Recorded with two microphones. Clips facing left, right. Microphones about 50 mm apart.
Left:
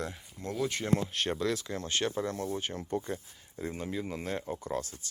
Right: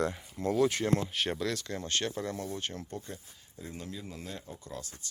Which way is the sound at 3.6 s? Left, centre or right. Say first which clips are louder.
Left 7 dB; left.